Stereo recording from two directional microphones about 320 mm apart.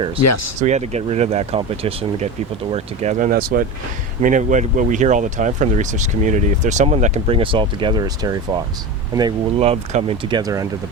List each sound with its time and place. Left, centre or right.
0.2 s speech: left
0.6 s speech: right